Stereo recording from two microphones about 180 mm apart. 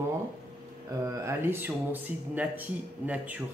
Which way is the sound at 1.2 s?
10° right (ahead or behind).